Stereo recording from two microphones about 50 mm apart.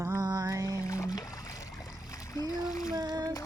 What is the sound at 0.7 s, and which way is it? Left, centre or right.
Speech, left.